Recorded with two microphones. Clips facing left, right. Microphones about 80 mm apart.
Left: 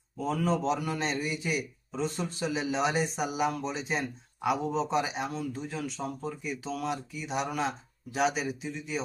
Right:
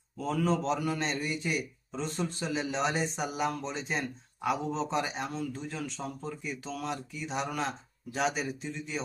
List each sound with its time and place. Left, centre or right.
0.2 s a man's voice: centre